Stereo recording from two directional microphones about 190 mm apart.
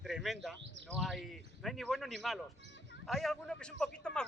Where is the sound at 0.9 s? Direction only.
Centre (ahead or behind).